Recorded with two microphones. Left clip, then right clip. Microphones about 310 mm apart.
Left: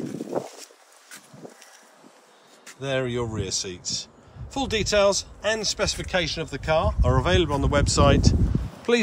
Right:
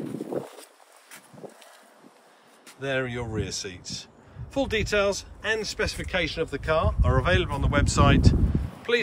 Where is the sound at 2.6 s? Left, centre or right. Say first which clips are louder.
Left 1 dB; centre.